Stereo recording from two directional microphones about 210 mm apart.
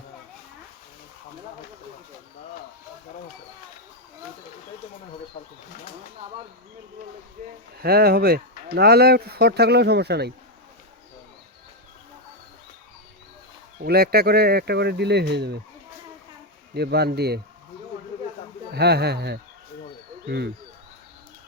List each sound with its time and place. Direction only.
7.8 s speech: 45° right (ahead or behind)
13.7 s speech: 45° right (ahead or behind)
16.7 s speech: 50° right (ahead or behind)
18.7 s speech: 50° right (ahead or behind)